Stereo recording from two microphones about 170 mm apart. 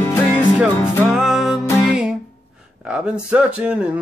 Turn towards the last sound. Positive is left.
turn(degrees=-5)  # may be behind; listen again after turning